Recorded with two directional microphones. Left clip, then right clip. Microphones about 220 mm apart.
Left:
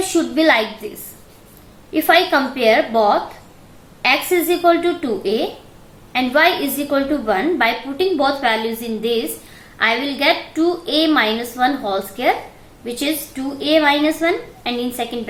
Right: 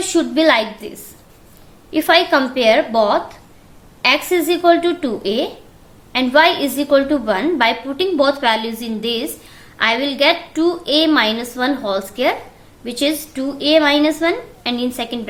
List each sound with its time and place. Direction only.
0.0 s a woman's voice: 35° right (ahead or behind)
1.9 s a woman's voice: 40° right (ahead or behind)